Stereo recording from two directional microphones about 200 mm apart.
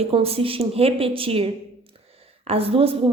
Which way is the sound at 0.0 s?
30° right (ahead or behind).